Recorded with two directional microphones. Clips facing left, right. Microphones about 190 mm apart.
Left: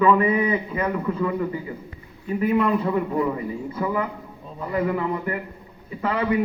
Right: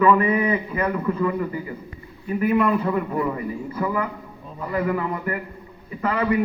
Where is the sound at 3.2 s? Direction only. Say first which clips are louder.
Left 1 dB; 10° left (ahead or behind).